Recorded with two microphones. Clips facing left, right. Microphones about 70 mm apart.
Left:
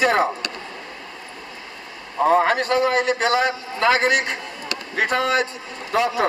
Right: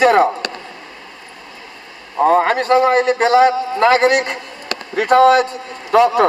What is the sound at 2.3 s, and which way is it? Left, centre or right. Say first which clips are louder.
A man's voice: right 4 dB; right.